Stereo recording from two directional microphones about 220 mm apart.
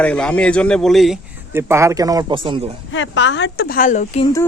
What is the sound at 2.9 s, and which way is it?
Speech, 60° left (ahead or behind).